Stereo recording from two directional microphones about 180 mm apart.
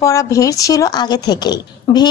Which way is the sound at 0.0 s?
15° left (ahead or behind).